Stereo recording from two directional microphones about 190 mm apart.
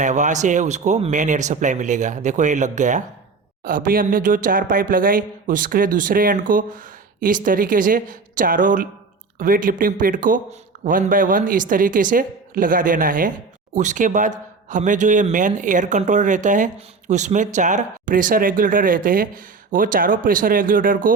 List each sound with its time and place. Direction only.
0.0 s speech: 40° right (ahead or behind)